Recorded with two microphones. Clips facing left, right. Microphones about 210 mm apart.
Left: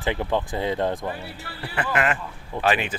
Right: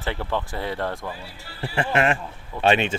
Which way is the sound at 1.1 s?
60° left (ahead or behind).